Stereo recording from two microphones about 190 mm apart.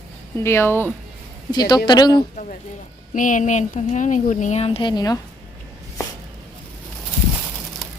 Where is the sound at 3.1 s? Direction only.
45° left (ahead or behind); by 5.2 s 20° left (ahead or behind).